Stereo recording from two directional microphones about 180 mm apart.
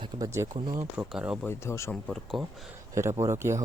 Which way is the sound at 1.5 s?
15° left (ahead or behind).